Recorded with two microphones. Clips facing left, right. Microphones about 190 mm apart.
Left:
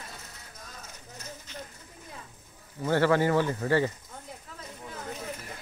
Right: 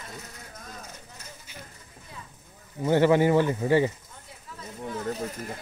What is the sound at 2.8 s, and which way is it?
Speech, 15° right (ahead or behind).